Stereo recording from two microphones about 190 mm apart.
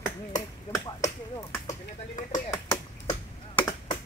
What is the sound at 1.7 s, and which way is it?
Speech, 40° left (ahead or behind).